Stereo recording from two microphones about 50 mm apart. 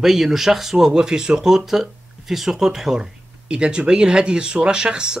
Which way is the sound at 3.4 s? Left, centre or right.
Centre.